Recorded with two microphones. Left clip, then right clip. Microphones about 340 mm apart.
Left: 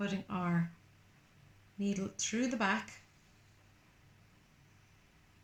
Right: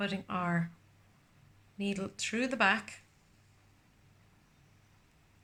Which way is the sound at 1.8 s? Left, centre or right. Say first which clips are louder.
Right 2 dB; right.